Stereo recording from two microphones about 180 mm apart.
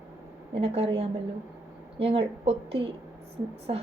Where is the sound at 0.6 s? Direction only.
35° right (ahead or behind).